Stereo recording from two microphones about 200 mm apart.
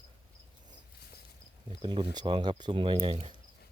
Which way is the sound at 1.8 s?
25° right (ahead or behind).